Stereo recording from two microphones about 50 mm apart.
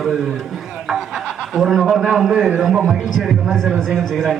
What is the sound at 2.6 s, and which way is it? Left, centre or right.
A man's voice, centre.